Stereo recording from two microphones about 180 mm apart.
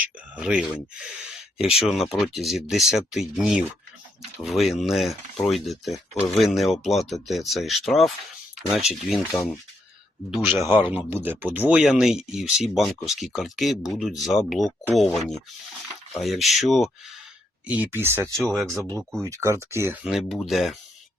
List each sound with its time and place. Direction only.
0.0 s speech: 5° right (ahead or behind)
10.9 s speech: 10° right (ahead or behind)
17.7 s speech: 10° right (ahead or behind)
20.1 s speech: centre (ahead or behind)